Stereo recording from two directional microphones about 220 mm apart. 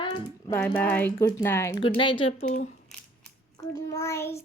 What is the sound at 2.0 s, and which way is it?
Speech, 20° left (ahead or behind).